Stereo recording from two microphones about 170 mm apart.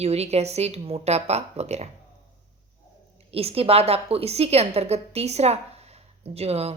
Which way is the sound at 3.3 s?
35° right (ahead or behind).